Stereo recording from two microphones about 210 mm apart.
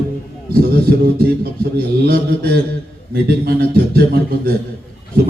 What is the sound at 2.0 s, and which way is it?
A man's voice, 45° right (ahead or behind).